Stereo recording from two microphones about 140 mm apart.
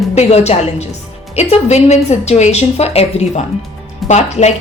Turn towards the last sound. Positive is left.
turn(degrees=50)  # may be behind; listen again after turning